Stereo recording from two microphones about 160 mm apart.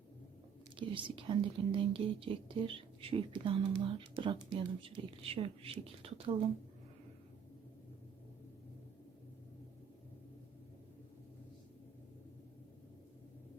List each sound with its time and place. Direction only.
0.8 s speech: 30° right (ahead or behind)